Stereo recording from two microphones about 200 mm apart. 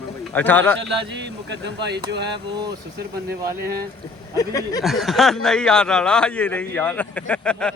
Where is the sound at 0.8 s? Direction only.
60° right (ahead or behind).